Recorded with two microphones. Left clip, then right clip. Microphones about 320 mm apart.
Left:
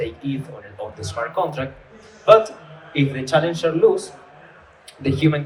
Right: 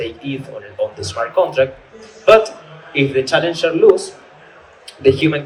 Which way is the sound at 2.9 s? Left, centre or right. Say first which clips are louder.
Right 4 dB; right.